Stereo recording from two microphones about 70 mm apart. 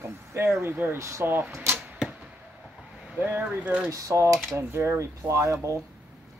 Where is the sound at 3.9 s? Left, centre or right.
Right.